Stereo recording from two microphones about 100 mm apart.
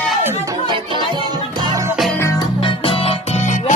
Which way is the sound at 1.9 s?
Centre (ahead or behind).